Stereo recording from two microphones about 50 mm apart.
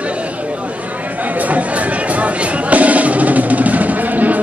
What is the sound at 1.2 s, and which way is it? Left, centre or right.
Music, right.